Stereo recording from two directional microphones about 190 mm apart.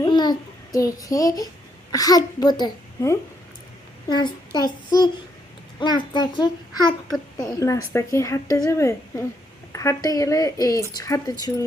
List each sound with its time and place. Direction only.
0.0 s babbling: 20° left (ahead or behind)
1.9 s a child's voice: 20° left (ahead or behind)